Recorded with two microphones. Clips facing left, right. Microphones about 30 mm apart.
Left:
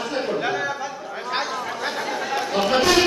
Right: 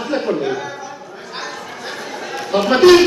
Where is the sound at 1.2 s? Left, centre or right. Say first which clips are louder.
Left 5 dB; left.